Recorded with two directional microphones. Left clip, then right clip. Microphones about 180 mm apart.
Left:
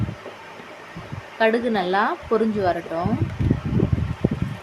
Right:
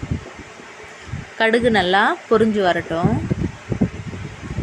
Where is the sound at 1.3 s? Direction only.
15° right (ahead or behind).